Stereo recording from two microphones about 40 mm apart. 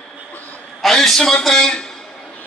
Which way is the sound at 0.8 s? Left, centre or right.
Centre.